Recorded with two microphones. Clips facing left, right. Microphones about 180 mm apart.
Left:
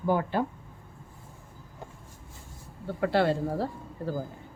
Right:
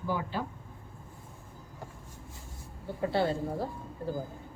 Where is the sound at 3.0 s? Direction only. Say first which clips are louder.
Left 4 dB; 70° left (ahead or behind).